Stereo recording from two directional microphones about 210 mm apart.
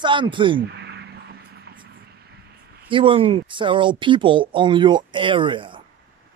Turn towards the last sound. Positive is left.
turn(degrees=-25)  # may be behind; listen again after turning